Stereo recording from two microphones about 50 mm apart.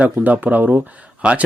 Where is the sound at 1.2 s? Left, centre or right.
Centre.